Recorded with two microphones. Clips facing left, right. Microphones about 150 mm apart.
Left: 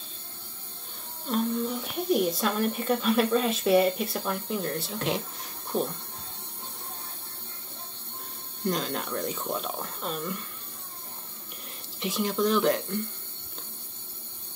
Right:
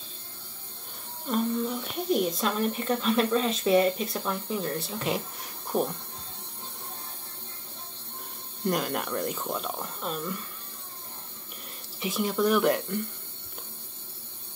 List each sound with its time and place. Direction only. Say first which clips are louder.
1.3 s a woman's voice: even; centre (ahead or behind)
5.7 s speech: right 1 dB; 15° right (ahead or behind)
8.6 s speech: right 1 dB; 10° right (ahead or behind)
12.0 s speech: even; 5° right (ahead or behind)